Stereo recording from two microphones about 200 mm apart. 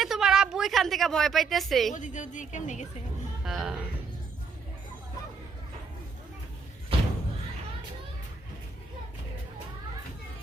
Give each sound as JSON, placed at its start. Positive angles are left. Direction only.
{"t": 0.0, "sound": "a woman's voice", "side_deg": 0}
{"t": 1.9, "sound": "a woman's voice", "side_deg": 40}
{"t": 3.4, "sound": "a woman's voice", "side_deg": 0}